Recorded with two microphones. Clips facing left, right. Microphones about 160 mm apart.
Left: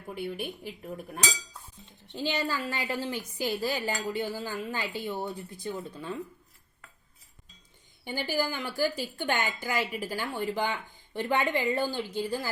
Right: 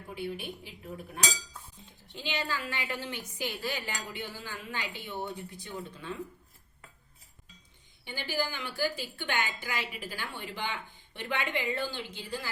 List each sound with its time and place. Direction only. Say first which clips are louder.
0.1 s a woman's voice: left 3 dB; 50° left (ahead or behind)
2.1 s a woman's voice: left 5 dB; 40° left (ahead or behind)
8.0 s a woman's voice: left 4 dB; 45° left (ahead or behind)